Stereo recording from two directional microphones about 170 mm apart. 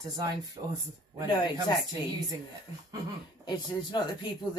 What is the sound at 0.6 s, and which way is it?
Speech, 40° right (ahead or behind).